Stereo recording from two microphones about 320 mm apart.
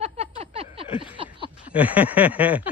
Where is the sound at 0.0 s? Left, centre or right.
Centre.